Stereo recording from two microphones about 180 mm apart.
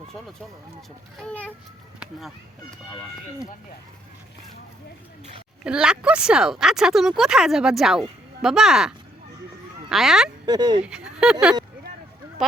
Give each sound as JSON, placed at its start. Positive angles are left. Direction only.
{"t": 1.2, "sound": "a child's voice", "side_deg": 10}
{"t": 5.6, "sound": "speech", "side_deg": -5}
{"t": 9.9, "sound": "speech", "side_deg": 0}
{"t": 10.4, "sound": "speech", "side_deg": -25}
{"t": 10.8, "sound": "speech", "side_deg": -5}